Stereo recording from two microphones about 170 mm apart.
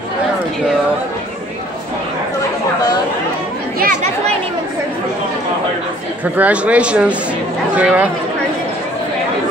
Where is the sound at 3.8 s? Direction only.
50° right (ahead or behind).